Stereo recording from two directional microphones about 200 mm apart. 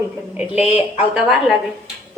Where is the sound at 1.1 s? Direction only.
Centre (ahead or behind).